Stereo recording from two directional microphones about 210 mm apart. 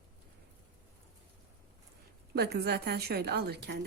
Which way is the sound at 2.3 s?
50° right (ahead or behind).